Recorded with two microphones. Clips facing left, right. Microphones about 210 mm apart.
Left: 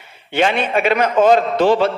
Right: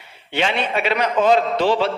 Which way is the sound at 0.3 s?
50° left (ahead or behind).